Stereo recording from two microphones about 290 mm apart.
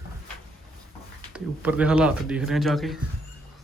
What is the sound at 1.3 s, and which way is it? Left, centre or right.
Speech, centre.